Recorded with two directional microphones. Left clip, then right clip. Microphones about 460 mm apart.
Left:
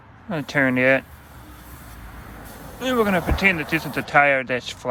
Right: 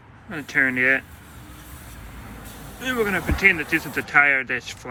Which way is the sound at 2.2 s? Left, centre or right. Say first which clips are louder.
Left 1 dB; centre.